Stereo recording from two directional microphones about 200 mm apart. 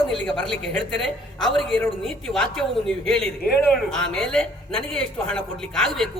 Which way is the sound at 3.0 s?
5° left (ahead or behind).